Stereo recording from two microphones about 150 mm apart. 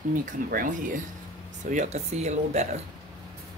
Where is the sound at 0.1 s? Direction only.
65° right (ahead or behind).